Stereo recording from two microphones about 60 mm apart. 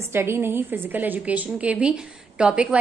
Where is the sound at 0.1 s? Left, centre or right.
Right.